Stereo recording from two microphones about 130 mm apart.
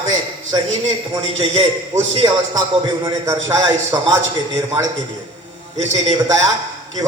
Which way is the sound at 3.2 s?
25° right (ahead or behind).